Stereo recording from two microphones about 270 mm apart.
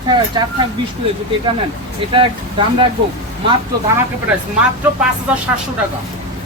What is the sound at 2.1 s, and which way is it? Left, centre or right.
Speech, centre.